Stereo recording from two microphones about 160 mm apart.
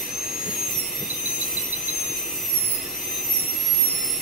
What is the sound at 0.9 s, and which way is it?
Jet engine, 55° left (ahead or behind).